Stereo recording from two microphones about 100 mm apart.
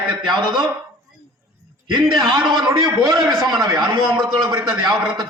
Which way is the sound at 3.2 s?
Centre (ahead or behind).